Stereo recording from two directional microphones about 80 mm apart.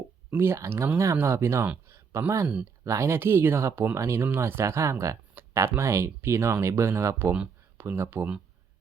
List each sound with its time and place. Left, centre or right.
0.3 s speech: right
1.6 s a sound: centre
2.1 s speech: right